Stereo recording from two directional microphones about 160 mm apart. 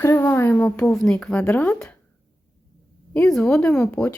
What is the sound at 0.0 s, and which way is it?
A woman's voice, 15° left (ahead or behind).